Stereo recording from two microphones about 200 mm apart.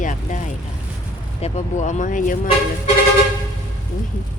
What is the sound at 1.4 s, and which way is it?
Speech, 30° left (ahead or behind).